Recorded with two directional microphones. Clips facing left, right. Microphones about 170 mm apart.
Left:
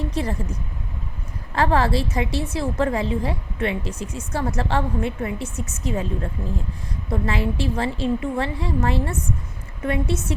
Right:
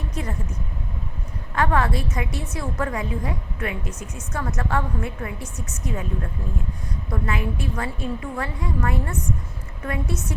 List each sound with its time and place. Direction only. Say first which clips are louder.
0.1 s speech: left 5 dB; 30° left (ahead or behind)
1.5 s a woman's voice: left 3 dB; 30° left (ahead or behind)
7.1 s a woman's voice: left 3 dB; 30° left (ahead or behind)